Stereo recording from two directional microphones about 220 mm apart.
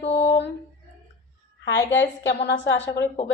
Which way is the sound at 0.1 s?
50° left (ahead or behind).